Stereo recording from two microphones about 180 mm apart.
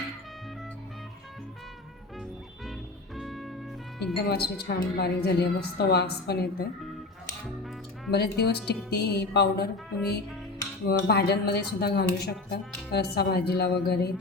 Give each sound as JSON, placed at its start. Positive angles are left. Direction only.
{"t": 3.2, "sound": "music", "side_deg": 0}
{"t": 4.3, "sound": "speech", "side_deg": 60}
{"t": 7.4, "sound": "music", "side_deg": 0}
{"t": 8.1, "sound": "speech", "side_deg": 65}